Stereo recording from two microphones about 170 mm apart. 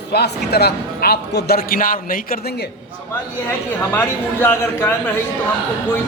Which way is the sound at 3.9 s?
10° left (ahead or behind).